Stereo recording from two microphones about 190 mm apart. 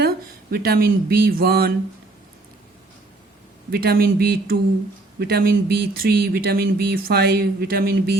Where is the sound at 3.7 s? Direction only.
55° right (ahead or behind).